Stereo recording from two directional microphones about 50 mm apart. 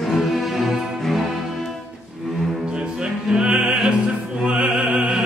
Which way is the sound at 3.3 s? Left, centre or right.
Centre.